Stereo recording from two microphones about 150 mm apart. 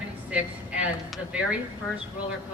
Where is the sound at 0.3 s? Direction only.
10° right (ahead or behind).